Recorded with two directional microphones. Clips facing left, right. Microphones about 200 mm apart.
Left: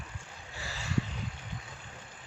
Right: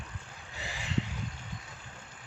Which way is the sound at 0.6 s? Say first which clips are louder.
Even; 15° right (ahead or behind).